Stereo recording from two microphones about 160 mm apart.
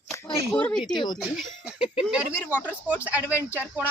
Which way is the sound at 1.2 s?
5° right (ahead or behind).